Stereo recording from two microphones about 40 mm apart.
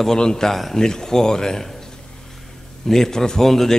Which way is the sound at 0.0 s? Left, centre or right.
Centre.